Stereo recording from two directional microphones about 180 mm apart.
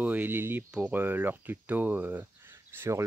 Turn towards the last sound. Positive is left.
turn(degrees=-15)  # may be behind; listen again after turning